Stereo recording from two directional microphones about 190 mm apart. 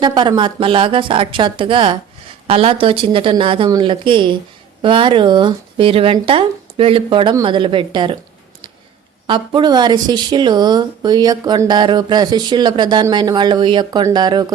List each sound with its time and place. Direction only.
0.0 s speech: 25° right (ahead or behind)
9.2 s speech: 25° right (ahead or behind)